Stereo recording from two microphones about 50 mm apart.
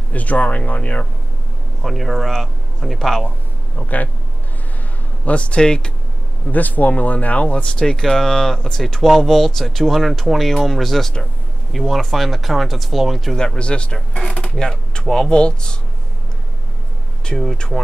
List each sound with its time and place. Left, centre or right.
0.1 s speech: left
1.8 s speech: centre
3.7 s speech: left
5.2 s speech: left
6.5 s speech: left; by 8.8 s centre
8.8 s speech: centre
13.4 s speech: centre
17.4 s speech: centre